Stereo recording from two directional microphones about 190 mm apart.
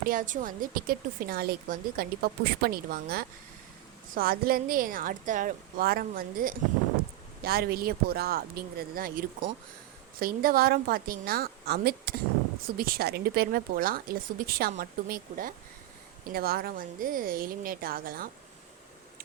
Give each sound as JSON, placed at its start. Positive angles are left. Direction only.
{"t": 0.0, "sound": "a woman's voice", "side_deg": -45}